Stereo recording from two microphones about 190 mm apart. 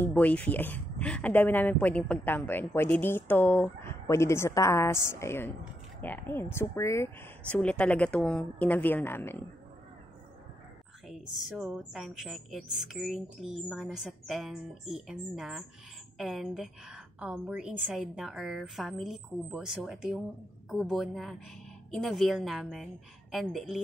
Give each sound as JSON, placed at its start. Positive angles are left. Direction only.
{"t": 0.0, "sound": "speech", "side_deg": 10}
{"t": 11.1, "sound": "speech", "side_deg": -5}